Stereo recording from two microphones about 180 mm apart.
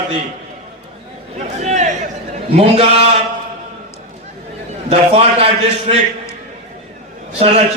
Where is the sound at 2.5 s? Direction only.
35° right (ahead or behind).